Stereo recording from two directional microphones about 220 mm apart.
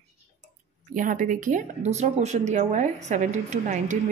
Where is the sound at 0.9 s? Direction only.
35° right (ahead or behind).